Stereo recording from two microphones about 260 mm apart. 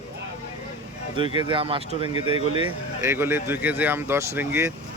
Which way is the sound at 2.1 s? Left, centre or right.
Left.